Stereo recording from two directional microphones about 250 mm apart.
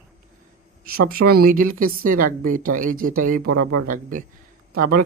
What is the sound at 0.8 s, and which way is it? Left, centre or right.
Speech, right.